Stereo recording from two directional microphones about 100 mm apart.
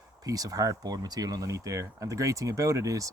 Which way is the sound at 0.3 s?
35° right (ahead or behind).